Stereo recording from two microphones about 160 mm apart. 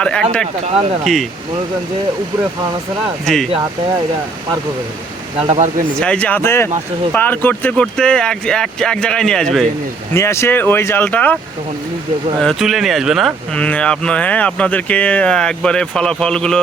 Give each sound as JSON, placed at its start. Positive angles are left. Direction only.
{"t": 0.0, "sound": "speech", "side_deg": 5}
{"t": 0.6, "sound": "speech", "side_deg": -40}
{"t": 1.0, "sound": "speech", "side_deg": 0}
{"t": 3.3, "sound": "speech", "side_deg": 5}
{"t": 5.4, "sound": "speech", "side_deg": -45}
{"t": 6.0, "sound": "speech", "side_deg": 5}
{"t": 10.2, "sound": "speech", "side_deg": 15}
{"t": 12.4, "sound": "speech", "side_deg": 0}